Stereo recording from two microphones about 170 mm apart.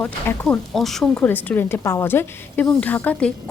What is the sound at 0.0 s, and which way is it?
A woman's voice, 10° left (ahead or behind).